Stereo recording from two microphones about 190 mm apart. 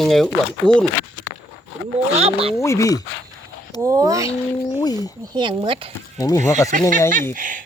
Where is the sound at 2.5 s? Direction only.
15° left (ahead or behind).